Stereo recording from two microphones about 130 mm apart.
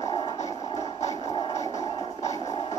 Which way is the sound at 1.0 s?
60° left (ahead or behind).